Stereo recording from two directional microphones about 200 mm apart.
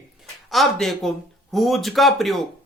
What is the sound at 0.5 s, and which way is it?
A man's voice, centre (ahead or behind).